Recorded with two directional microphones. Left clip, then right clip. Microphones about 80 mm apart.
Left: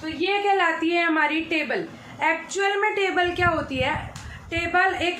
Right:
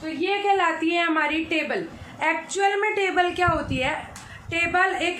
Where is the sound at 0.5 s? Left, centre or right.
Right.